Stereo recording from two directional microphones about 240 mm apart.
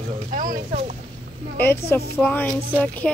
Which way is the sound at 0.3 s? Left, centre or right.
Right.